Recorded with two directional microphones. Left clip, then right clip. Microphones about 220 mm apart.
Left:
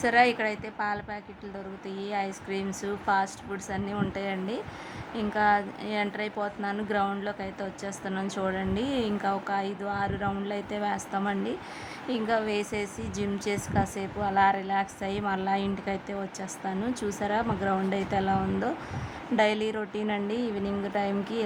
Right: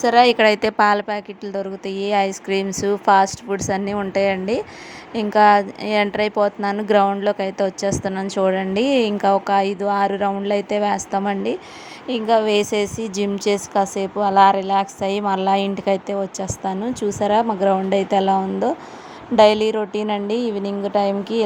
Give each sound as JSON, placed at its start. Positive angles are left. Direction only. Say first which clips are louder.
{"t": 0.0, "sound": "a woman's voice", "louder": "right 10 dB", "side_deg": -25}